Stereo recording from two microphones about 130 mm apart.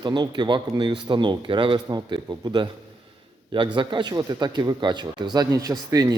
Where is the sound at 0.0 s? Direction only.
35° right (ahead or behind).